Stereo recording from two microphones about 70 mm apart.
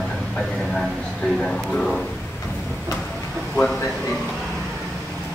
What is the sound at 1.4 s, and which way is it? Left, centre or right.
Speech, centre.